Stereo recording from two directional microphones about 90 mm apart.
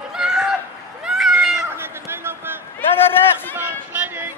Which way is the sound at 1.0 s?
5° right (ahead or behind).